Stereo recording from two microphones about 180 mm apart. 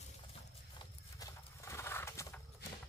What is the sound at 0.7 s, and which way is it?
Horse, 20° left (ahead or behind).